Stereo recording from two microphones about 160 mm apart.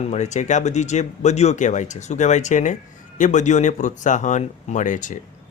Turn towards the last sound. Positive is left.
turn(degrees=55)  # may be behind; listen again after turning